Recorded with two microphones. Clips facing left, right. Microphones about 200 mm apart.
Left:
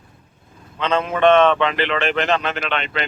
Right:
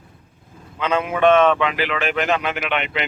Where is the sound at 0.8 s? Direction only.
10° right (ahead or behind).